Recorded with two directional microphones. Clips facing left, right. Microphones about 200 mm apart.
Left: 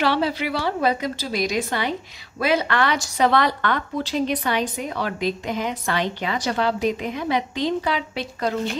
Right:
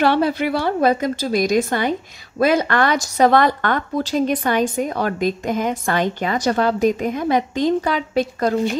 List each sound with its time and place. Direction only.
0.0 s a woman's voice: 50° right (ahead or behind)